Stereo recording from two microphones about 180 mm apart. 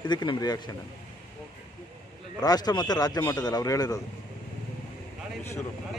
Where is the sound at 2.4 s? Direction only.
20° left (ahead or behind).